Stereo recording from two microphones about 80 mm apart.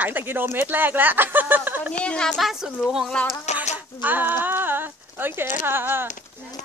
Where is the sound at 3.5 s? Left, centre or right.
Right.